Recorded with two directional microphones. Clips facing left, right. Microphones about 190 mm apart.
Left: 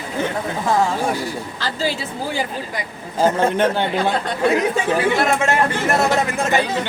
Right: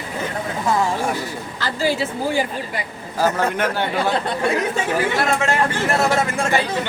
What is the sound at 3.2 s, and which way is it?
Speech, 25° left (ahead or behind).